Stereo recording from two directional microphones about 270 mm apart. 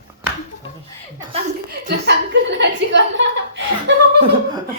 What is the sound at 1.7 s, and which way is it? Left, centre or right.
A woman's voice, right.